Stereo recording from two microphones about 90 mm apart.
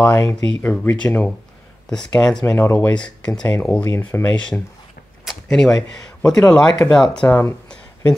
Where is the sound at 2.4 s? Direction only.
25° left (ahead or behind).